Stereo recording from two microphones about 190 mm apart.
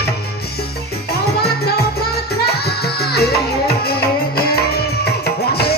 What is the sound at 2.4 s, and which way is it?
Music, 55° left (ahead or behind).